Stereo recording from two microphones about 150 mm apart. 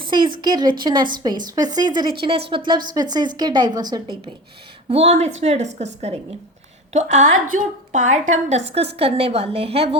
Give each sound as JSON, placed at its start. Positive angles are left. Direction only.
{"t": 0.0, "sound": "a woman's voice", "side_deg": -30}
{"t": 4.9, "sound": "a woman's voice", "side_deg": -45}